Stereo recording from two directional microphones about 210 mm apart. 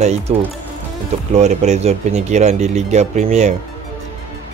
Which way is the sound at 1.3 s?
35° right (ahead or behind).